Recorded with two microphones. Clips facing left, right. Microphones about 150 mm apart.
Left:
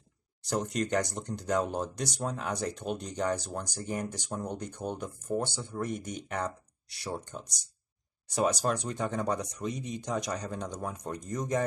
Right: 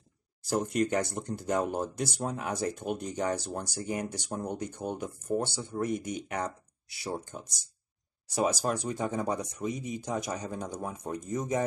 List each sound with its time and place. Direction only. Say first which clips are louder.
0.4 s a sound: right 2 dB; 5° right (ahead or behind)
0.7 s speech: right 1 dB; 10° right (ahead or behind)
3.3 s speech: left 1 dB; 55° right (ahead or behind)
3.7 s speech: right 1 dB; 10° right (ahead or behind)